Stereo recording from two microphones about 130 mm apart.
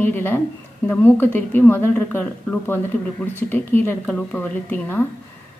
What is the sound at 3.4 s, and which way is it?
A woman's voice, 15° left (ahead or behind).